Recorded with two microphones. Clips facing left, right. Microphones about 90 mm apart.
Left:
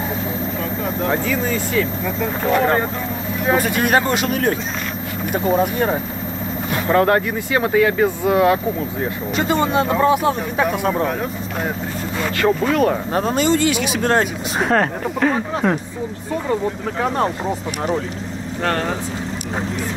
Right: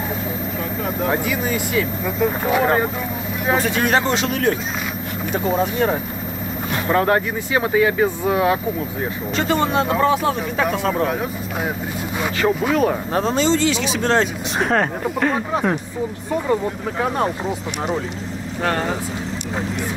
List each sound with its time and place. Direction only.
1.0 s speech: 10° right (ahead or behind)
3.4 s speech: 5° left (ahead or behind)
6.9 s speech: 15° right (ahead or behind)
9.4 s speech: 5° left (ahead or behind)
12.2 s speech: 10° right (ahead or behind)
13.1 s speech: 5° left (ahead or behind)
13.4 s speech: 55° left (ahead or behind)
13.8 s speech: 10° left (ahead or behind)
18.6 s speech: 10° right (ahead or behind)